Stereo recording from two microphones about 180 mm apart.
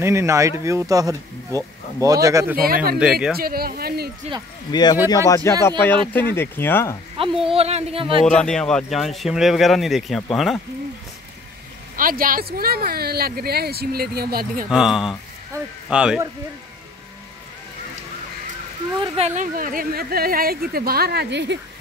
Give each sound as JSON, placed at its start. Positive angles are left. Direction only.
{"t": 0.0, "sound": "speech", "side_deg": -15}
{"t": 2.6, "sound": "speech", "side_deg": -55}
{"t": 3.0, "sound": "speech", "side_deg": -5}
{"t": 3.3, "sound": "speech", "side_deg": -55}
{"t": 4.6, "sound": "speech", "side_deg": 25}
{"t": 7.2, "sound": "speech", "side_deg": -30}
{"t": 8.3, "sound": "speech", "side_deg": 5}
{"t": 12.0, "sound": "speech", "side_deg": -50}
{"t": 14.7, "sound": "speech", "side_deg": -5}
{"t": 18.9, "sound": "speech", "side_deg": -35}